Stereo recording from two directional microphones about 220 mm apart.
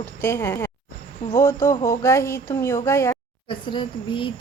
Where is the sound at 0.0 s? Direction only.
10° left (ahead or behind).